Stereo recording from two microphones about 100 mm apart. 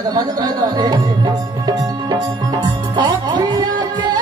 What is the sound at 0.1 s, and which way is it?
Music, 45° right (ahead or behind).